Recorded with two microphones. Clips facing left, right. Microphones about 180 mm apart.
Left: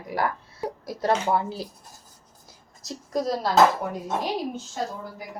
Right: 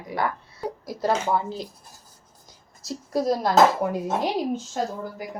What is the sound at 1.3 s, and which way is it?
Speech, 5° left (ahead or behind).